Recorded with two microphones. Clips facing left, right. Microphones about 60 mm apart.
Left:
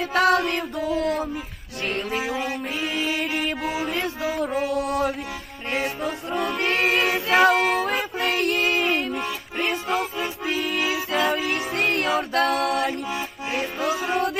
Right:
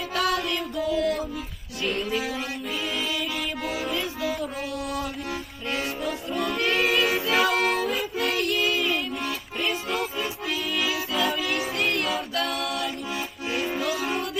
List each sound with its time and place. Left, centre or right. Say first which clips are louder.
0.1 s music: left 6 dB; left
1.8 s saxophone: left 1 dB; left
2.9 s music: left 6 dB; left
4.7 s mantra: left 7 dB; left
5.7 s music: left 3 dB; left
6.7 s choir: left 1 dB; left
7.5 s music: left 3 dB; centre
7.9 s music: left 2 dB; left
10.8 s music: left 1 dB; left